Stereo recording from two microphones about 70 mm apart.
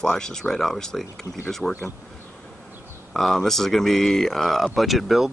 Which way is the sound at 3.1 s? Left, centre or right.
Centre.